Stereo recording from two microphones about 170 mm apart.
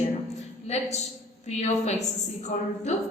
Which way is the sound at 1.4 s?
40° left (ahead or behind).